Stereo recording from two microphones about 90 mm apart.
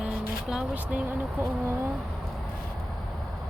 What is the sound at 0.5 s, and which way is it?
Speech, 15° right (ahead or behind).